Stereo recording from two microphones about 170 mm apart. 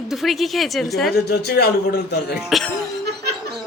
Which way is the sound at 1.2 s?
70° left (ahead or behind).